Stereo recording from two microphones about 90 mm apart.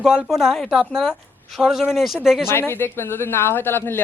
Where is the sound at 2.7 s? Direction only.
25° left (ahead or behind).